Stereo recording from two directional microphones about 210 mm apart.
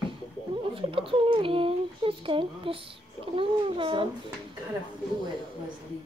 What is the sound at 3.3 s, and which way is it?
Speech, 25° right (ahead or behind).